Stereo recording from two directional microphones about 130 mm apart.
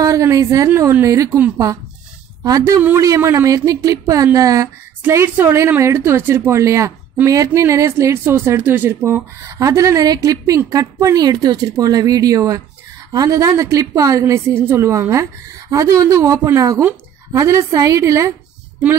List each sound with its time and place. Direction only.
0.0 s speech: 25° right (ahead or behind)
2.4 s speech: 25° right (ahead or behind)